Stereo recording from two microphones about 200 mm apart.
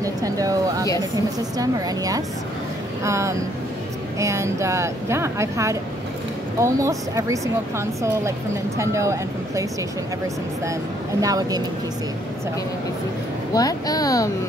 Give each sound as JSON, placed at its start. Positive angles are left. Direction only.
{"t": 0.0, "sound": "a sound", "side_deg": -15}
{"t": 1.6, "sound": "a woman's voice", "side_deg": -15}
{"t": 11.1, "sound": "a woman's voice", "side_deg": -20}
{"t": 13.6, "sound": "speech", "side_deg": 20}